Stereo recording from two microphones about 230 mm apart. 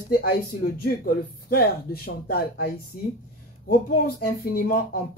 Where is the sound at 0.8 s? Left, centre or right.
Left.